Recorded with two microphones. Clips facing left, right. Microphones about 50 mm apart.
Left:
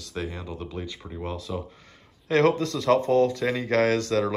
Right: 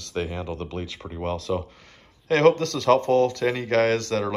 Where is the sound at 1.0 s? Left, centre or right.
Right.